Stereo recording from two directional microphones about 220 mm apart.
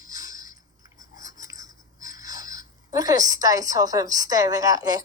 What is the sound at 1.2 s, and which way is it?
Speech, 15° right (ahead or behind).